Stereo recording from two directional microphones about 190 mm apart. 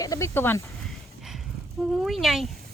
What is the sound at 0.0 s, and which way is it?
Speech, 15° left (ahead or behind).